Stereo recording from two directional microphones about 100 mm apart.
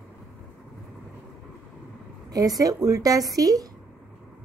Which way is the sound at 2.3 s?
40° right (ahead or behind).